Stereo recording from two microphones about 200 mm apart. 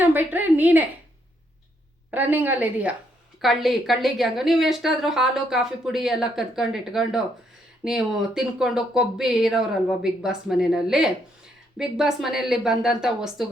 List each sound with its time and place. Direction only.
0.0 s a woman's voice: 10° right (ahead or behind)
2.0 s a woman's voice: 10° right (ahead or behind)